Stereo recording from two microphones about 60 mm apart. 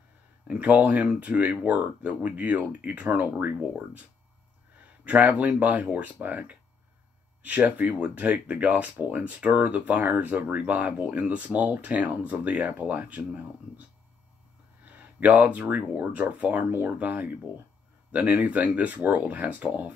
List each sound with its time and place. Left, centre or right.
0.5 s speech: right
5.0 s speech: right
7.7 s speech: right
14.9 s speech: right